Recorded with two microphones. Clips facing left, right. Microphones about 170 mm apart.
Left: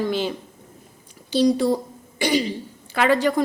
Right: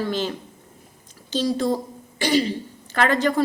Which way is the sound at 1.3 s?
10° left (ahead or behind).